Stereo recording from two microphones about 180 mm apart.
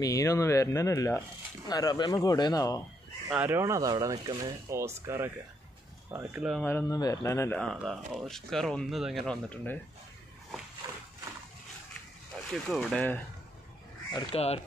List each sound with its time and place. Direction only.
0.0 s speech: 20° left (ahead or behind)
3.3 s speech: 10° right (ahead or behind)
6.6 s speech: 15° left (ahead or behind)
10.8 s horse: 20° right (ahead or behind)
12.5 s speech: centre (ahead or behind)
14.3 s speech: 35° left (ahead or behind)